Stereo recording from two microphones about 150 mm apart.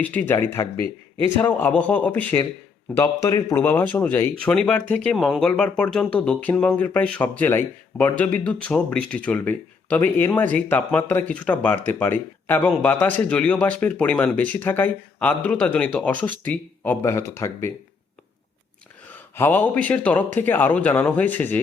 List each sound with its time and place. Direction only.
0.0 s speech: 10° left (ahead or behind)
2.9 s speech: 20° left (ahead or behind)
19.1 s speech: 10° left (ahead or behind)